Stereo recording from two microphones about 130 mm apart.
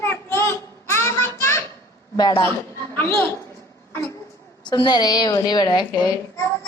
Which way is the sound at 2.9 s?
15° left (ahead or behind).